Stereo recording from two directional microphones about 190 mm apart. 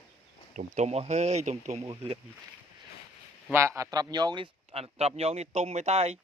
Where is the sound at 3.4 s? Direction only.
15° right (ahead or behind).